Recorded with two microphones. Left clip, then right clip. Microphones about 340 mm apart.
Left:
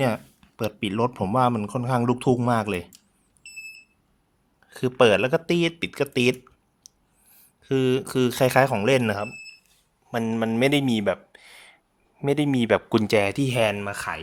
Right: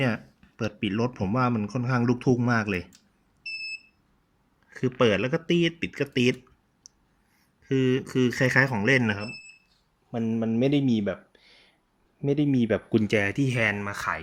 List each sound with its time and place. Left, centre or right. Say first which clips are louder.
0.0 s speech: left 4 dB; centre
4.7 s speech: left 5 dB; centre
7.6 s speech: left 3 dB; centre